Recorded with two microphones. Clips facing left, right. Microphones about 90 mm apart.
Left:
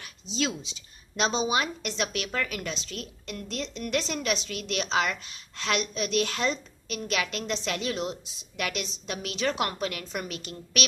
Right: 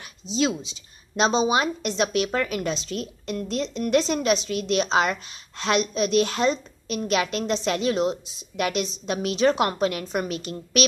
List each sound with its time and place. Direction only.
0.0 s a woman's voice: 20° right (ahead or behind)